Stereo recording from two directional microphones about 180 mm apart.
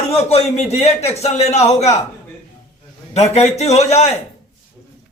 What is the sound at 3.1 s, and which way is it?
A man's voice, 35° left (ahead or behind).